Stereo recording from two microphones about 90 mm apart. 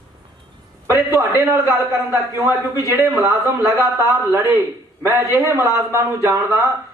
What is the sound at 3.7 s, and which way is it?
Speech, 30° right (ahead or behind).